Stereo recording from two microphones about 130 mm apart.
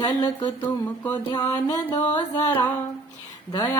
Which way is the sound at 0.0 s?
35° left (ahead or behind).